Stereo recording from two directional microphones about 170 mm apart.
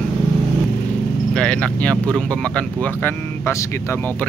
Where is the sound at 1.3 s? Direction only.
5° left (ahead or behind).